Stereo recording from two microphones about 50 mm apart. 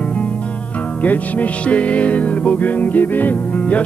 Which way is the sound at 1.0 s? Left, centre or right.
Left.